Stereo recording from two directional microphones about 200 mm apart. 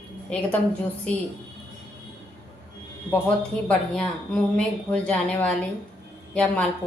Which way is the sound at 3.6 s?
5° left (ahead or behind).